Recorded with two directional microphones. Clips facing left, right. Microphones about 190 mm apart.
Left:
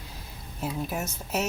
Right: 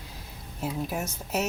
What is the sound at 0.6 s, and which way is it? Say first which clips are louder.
Speech: even; 10° right (ahead or behind).